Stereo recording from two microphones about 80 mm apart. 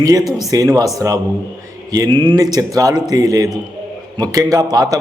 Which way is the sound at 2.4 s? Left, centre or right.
Right.